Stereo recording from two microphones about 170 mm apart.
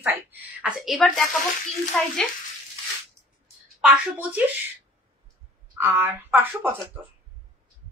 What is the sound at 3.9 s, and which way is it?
Speech, 10° right (ahead or behind).